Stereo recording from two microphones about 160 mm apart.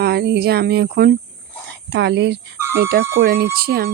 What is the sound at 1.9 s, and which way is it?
Speech, 90° right.